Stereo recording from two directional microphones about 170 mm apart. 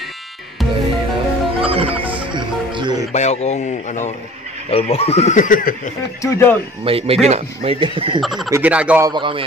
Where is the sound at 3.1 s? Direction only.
40° left (ahead or behind).